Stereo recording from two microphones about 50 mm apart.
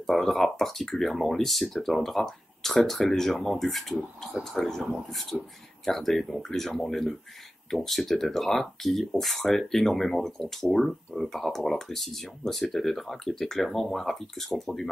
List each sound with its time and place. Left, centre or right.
0.0 s speech: centre